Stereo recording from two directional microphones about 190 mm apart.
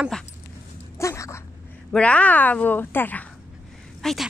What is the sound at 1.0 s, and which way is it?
Dog, 15° left (ahead or behind).